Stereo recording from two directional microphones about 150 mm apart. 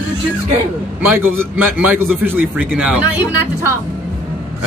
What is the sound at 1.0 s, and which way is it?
Speech, 15° right (ahead or behind).